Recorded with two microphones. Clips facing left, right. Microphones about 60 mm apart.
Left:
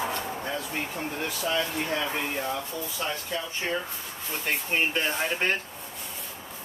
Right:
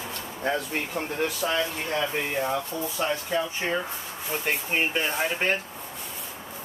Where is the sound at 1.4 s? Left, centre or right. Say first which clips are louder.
Right 1 dB; right.